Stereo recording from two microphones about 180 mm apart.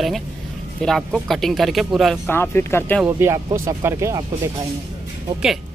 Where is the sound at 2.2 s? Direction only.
10° left (ahead or behind).